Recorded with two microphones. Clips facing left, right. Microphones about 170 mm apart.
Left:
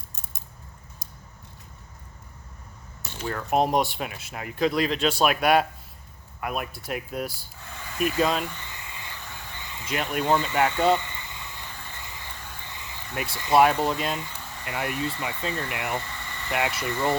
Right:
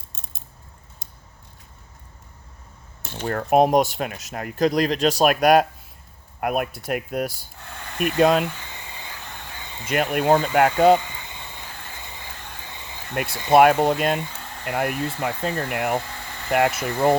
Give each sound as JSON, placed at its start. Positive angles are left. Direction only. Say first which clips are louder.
{"t": 3.2, "sound": "speech", "louder": "right 6 dB", "side_deg": -55}
{"t": 6.4, "sound": "speech", "louder": "right 7 dB", "side_deg": -55}
{"t": 8.8, "sound": "vehicle", "louder": "right 2 dB", "side_deg": -30}
{"t": 9.8, "sound": "speech", "louder": "right 6 dB", "side_deg": -55}
{"t": 10.9, "sound": "cricket", "louder": "right 6 dB", "side_deg": -25}
{"t": 12.7, "sound": "a sound", "louder": "right 2 dB", "side_deg": -25}
{"t": 13.1, "sound": "speech", "louder": "right 5 dB", "side_deg": -55}